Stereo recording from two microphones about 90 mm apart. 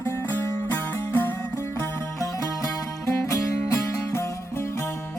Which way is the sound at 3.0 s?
30° left (ahead or behind).